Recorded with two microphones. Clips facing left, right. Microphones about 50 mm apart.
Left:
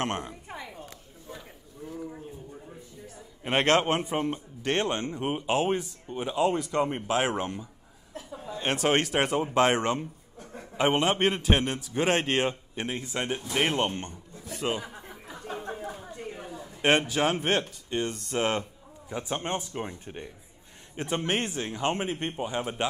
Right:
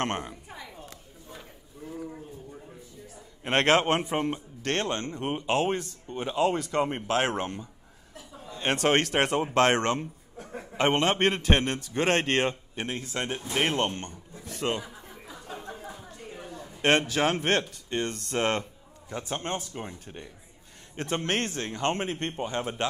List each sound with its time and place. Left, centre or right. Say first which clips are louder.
0.0 s speech: right 1 dB; centre
0.5 s a sound: left 3 dB; left
1.8 s a sound: even; centre
3.2 s a man's voice: right 1 dB; centre
4.6 s speech: left 1 dB; centre
10.8 s speech: even; centre
14.9 s snicker: left 2 dB; left
15.3 s a sound: left 4 dB; left; by 17.2 s centre
17.2 s speech: right 1 dB; centre